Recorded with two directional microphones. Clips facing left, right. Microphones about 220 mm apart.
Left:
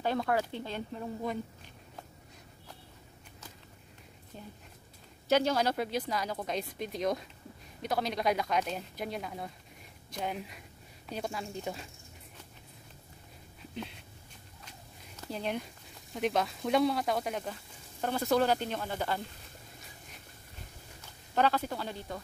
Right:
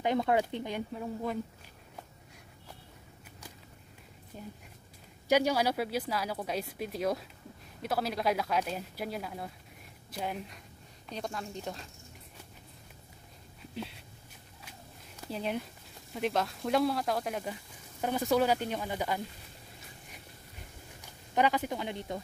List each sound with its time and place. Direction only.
0.0 s speech: 20° right (ahead or behind)
1.0 s speech: centre (ahead or behind)
4.3 s speech: 10° right (ahead or behind); by 11.9 s 5° left (ahead or behind)
15.3 s speech: 5° right (ahead or behind)
21.0 s speech: 15° right (ahead or behind)